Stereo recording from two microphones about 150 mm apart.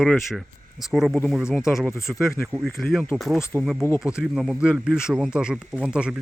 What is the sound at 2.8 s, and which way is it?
Speech, centre (ahead or behind).